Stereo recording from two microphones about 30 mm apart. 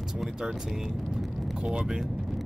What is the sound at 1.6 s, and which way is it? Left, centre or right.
Speech, right.